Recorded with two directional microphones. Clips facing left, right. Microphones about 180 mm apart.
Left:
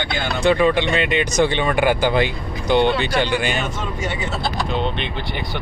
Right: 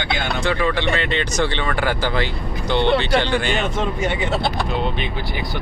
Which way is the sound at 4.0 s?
55° right (ahead or behind).